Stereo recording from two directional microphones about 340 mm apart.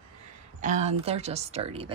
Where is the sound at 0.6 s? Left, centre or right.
Centre.